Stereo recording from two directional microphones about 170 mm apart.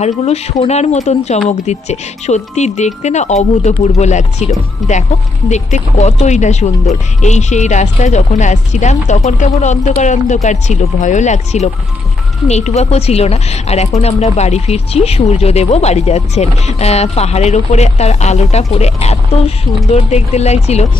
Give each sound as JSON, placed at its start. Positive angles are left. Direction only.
{"t": 0.0, "sound": "speech", "side_deg": 40}
{"t": 5.5, "sound": "speech", "side_deg": 40}